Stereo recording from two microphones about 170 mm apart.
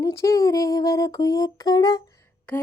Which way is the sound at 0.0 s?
20° left (ahead or behind).